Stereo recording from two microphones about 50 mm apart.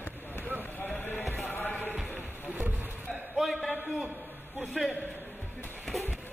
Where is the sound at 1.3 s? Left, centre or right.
Left.